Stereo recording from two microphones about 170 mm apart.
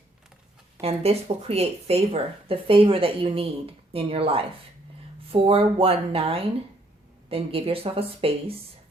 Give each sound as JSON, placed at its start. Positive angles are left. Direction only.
{"t": 0.8, "sound": "a woman's voice", "side_deg": -35}